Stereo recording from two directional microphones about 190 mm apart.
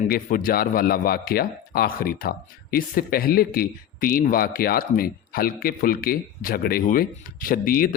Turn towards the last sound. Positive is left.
turn(degrees=50)  # may be behind; listen again after turning